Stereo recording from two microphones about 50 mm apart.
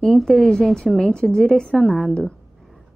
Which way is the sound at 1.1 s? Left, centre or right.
Centre.